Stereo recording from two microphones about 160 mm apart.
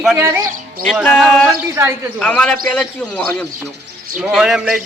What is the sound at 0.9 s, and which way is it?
A man's voice, 5° left (ahead or behind).